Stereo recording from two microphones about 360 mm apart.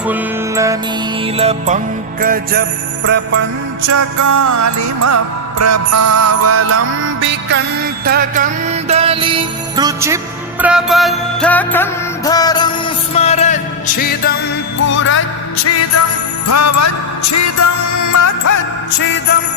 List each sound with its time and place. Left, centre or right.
0.1 s music: centre; by 2.6 s right
3.8 s music: right; by 15.2 s left
16.5 s music: left
18.9 s music: left